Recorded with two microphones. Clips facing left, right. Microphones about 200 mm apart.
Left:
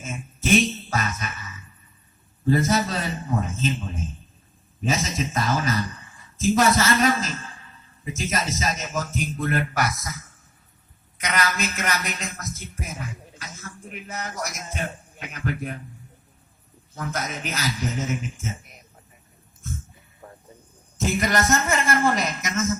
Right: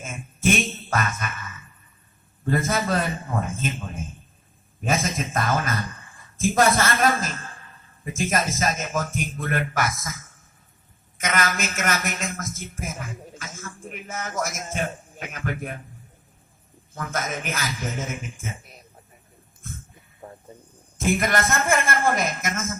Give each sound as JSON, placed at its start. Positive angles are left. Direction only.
{"t": 0.0, "sound": "a man's voice", "side_deg": -50}
{"t": 16.9, "sound": "a man's voice", "side_deg": -50}
{"t": 20.2, "sound": "a sound", "side_deg": -20}
{"t": 21.0, "sound": "a man's voice", "side_deg": -55}